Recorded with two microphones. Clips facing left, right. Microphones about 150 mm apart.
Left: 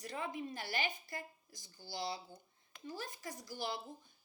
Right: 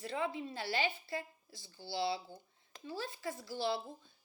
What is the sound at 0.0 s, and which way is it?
Speech, 15° left (ahead or behind).